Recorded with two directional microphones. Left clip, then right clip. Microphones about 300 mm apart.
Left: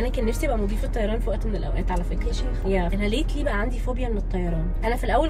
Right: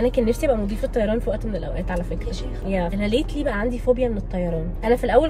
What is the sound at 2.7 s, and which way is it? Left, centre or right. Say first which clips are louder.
A woman's voice: right 4 dB; centre.